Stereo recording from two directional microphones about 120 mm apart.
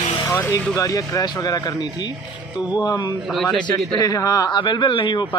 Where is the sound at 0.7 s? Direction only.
30° left (ahead or behind).